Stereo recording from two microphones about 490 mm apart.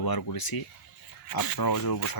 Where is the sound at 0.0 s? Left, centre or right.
Left.